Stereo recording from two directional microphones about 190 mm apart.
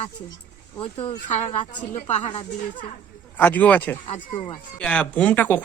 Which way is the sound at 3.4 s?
10° left (ahead or behind).